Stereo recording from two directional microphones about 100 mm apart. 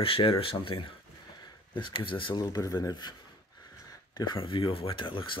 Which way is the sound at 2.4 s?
40° left (ahead or behind).